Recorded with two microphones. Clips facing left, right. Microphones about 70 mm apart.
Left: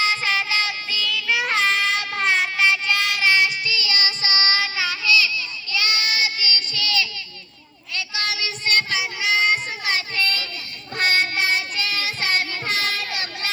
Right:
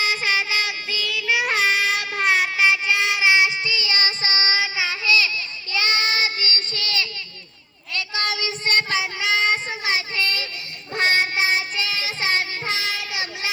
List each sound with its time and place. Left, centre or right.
0.0 s child singing: centre